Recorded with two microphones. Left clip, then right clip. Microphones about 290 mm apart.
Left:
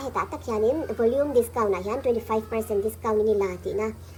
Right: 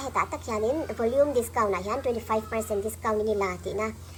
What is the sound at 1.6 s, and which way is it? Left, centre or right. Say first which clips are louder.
A woman's voice: left 1 dB; left.